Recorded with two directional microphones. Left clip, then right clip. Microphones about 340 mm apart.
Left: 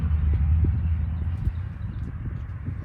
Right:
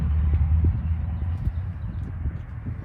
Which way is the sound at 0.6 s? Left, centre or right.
Right.